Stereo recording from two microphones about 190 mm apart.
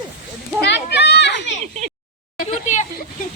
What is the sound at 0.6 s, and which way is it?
Children playing, 65° left (ahead or behind).